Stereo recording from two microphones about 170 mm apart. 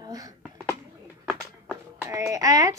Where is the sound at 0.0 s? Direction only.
20° right (ahead or behind).